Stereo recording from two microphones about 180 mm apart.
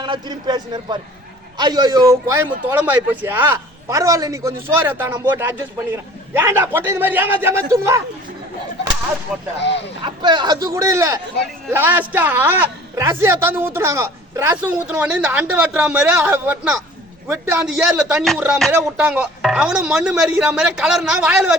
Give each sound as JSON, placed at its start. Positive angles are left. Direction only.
{"t": 0.0, "sound": "a man's voice", "side_deg": -25}
{"t": 9.6, "sound": "speech", "side_deg": 75}
{"t": 10.0, "sound": "a man's voice", "side_deg": -25}